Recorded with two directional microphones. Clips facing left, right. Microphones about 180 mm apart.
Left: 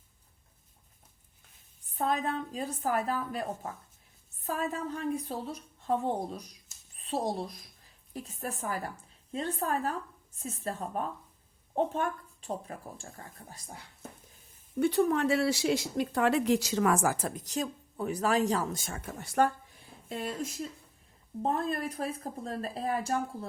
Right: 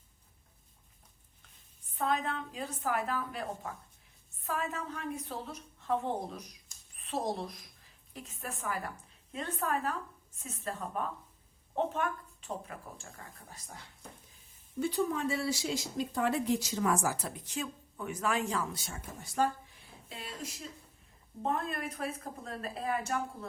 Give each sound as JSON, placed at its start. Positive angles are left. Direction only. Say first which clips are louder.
{"t": 2.0, "sound": "speech", "louder": "left 2 dB", "side_deg": 40}
{"t": 14.8, "sound": "speech", "louder": "left 6 dB", "side_deg": 60}
{"t": 20.1, "sound": "speech", "louder": "left 8 dB", "side_deg": 50}
{"t": 21.4, "sound": "speech", "louder": "left 3 dB", "side_deg": 35}